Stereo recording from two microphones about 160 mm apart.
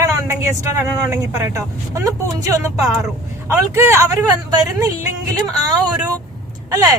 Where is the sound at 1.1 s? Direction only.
20° right (ahead or behind).